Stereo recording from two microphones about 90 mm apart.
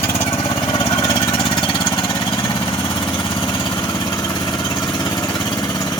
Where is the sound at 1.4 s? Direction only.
65° left (ahead or behind).